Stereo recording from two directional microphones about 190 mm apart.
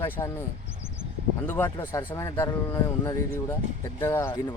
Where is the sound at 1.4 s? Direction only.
15° left (ahead or behind).